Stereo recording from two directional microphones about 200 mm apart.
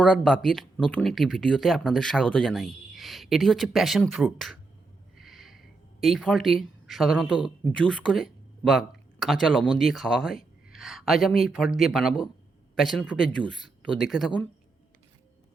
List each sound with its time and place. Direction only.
0.0 s speech: 5° left (ahead or behind)
5.1 s a sound: centre (ahead or behind)
7.6 s a man's voice: 5° left (ahead or behind)